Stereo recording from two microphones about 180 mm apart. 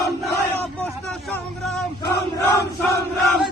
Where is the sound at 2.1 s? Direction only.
15° left (ahead or behind).